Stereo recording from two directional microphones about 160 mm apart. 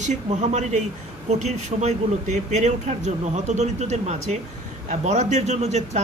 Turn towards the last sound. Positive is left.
turn(degrees=-45)  # may be behind; listen again after turning